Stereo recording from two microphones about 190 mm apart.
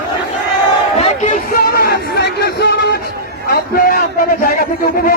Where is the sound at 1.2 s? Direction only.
45° left (ahead or behind).